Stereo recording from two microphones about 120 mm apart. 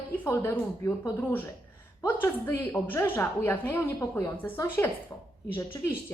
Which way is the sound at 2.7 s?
15° left (ahead or behind).